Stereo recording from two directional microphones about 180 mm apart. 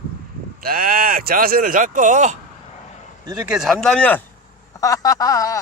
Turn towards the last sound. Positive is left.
turn(degrees=20)  # may be behind; listen again after turning